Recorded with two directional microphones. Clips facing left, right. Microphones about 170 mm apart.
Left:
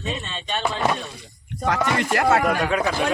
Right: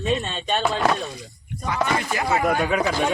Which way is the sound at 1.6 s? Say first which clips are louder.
Left 2 dB; 75° left (ahead or behind).